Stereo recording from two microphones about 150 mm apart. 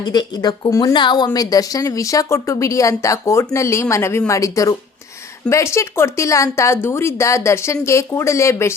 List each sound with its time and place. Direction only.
0.0 s speech: 30° left (ahead or behind)
5.7 s speech: 15° left (ahead or behind)